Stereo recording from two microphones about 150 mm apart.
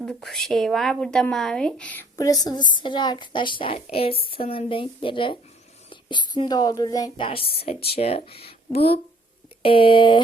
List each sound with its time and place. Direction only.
0.0 s a woman's voice: 5° left (ahead or behind)
2.1 s a woman's voice: 25° left (ahead or behind)
7.3 s a woman's voice: 40° left (ahead or behind)